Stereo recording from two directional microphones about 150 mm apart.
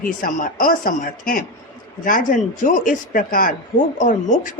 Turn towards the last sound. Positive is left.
turn(degrees=60)  # may be behind; listen again after turning